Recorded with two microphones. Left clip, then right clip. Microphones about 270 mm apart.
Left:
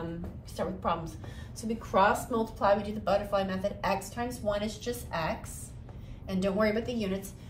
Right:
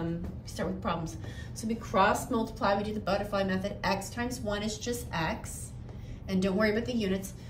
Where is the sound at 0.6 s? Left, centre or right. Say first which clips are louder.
Left 2 dB; centre.